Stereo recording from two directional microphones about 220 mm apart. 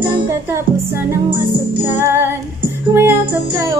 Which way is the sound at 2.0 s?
10° right (ahead or behind).